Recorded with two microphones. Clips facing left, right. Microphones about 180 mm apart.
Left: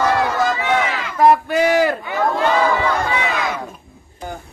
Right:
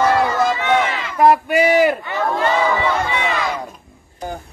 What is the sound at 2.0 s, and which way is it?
Crowd, centre (ahead or behind).